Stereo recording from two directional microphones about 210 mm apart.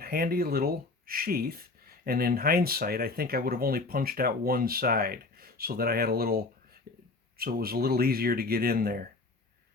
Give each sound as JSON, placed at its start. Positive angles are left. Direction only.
{"t": 0.0, "sound": "speech", "side_deg": -45}